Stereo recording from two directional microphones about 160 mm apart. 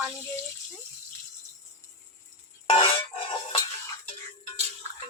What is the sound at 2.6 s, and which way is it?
Music, 35° left (ahead or behind).